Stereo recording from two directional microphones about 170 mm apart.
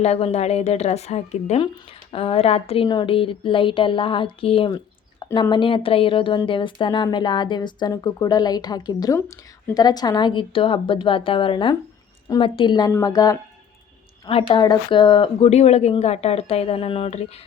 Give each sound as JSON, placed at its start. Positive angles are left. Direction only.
{"t": 0.0, "sound": "speech", "side_deg": 40}
{"t": 14.3, "sound": "speech", "side_deg": 35}